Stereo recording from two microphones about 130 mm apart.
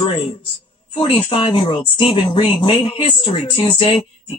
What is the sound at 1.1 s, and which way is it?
Speech, 40° left (ahead or behind).